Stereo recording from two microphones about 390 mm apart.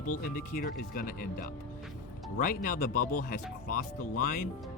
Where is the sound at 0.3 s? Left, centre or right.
Left.